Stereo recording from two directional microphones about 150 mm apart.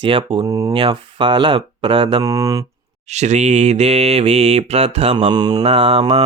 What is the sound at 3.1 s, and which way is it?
Mantra, 50° right (ahead or behind).